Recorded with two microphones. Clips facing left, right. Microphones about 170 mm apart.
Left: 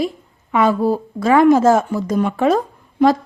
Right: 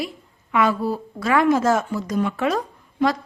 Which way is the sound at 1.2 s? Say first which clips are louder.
Left 6 dB; 25° left (ahead or behind).